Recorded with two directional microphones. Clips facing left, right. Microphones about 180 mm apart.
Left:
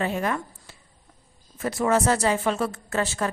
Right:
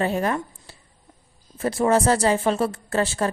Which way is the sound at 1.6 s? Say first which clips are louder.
Right 3 dB; 30° right (ahead or behind).